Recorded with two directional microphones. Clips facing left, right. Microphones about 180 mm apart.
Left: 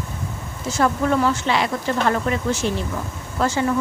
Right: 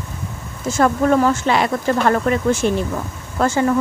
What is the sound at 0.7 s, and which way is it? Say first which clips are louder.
Speech: right 4 dB; 50° right (ahead or behind).